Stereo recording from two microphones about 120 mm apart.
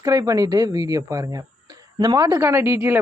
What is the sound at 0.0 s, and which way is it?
A man's voice, 30° right (ahead or behind).